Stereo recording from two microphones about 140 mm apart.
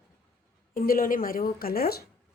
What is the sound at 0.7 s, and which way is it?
A woman's voice, 90° left.